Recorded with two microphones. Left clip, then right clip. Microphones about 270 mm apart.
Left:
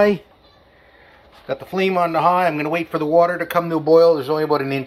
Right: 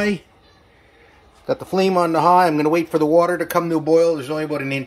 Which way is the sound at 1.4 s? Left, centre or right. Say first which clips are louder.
Right 2 dB; right.